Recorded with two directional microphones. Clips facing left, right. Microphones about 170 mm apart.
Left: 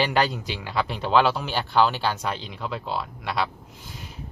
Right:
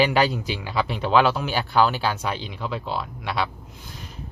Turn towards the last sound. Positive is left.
turn(degrees=0)  # may be behind; listen again after turning